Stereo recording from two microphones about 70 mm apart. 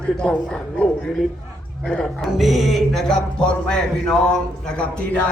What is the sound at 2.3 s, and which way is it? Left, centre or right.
Speech, centre.